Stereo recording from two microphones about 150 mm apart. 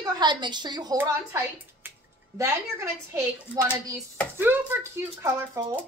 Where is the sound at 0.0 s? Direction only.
30° right (ahead or behind).